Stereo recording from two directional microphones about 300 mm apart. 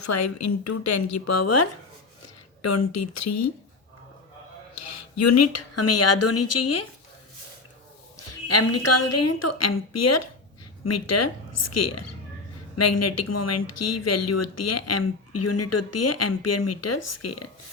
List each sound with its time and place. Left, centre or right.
0.0 s speech: left
4.7 s speech: left
8.1 s speech: left